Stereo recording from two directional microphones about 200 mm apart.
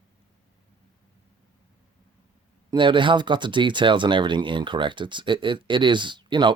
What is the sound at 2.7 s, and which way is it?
Speech, 25° right (ahead or behind).